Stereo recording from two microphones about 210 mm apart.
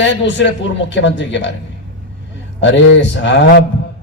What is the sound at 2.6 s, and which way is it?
Speech, 60° left (ahead or behind).